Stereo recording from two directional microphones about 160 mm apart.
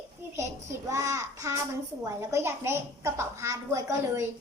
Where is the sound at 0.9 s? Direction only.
20° right (ahead or behind).